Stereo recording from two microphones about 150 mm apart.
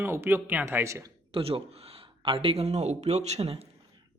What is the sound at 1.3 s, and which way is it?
Speech, 40° right (ahead or behind).